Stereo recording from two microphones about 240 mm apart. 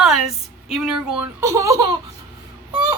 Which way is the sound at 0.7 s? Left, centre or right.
Centre.